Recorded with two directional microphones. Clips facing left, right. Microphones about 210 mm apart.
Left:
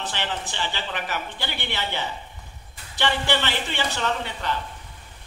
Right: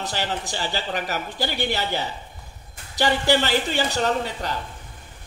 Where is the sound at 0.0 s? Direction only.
40° right (ahead or behind).